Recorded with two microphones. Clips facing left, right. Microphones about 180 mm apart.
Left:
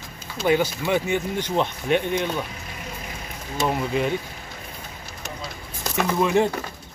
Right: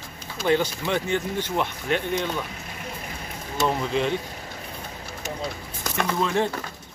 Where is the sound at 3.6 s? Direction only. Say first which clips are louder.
Even; 5° left (ahead or behind).